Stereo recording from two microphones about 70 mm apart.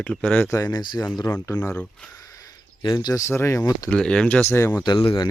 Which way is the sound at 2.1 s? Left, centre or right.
Left.